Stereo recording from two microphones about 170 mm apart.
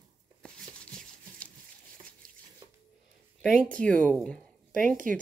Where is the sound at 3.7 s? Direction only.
5° left (ahead or behind).